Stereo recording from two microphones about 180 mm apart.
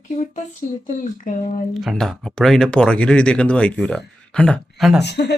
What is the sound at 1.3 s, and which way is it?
Speech, 50° left (ahead or behind).